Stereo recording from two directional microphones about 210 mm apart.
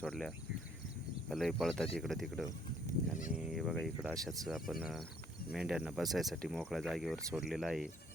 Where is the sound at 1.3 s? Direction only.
Centre (ahead or behind).